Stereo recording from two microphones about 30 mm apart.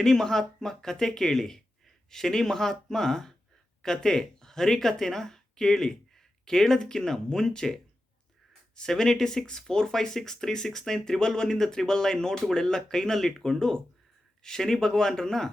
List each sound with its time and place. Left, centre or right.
0.0 s speech: centre
9.0 s speech: centre
11.7 s speech: left